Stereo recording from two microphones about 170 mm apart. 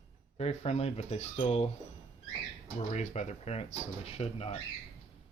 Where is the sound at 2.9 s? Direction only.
40° left (ahead or behind).